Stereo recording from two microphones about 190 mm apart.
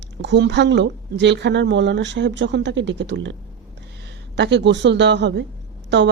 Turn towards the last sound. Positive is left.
turn(degrees=-70)  # may be behind; listen again after turning